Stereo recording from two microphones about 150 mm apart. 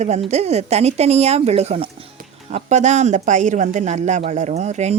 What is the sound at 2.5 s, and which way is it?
Speech, 50° right (ahead or behind).